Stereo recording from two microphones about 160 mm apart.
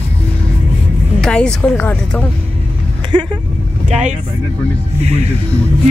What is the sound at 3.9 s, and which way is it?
Speech, 45° right (ahead or behind).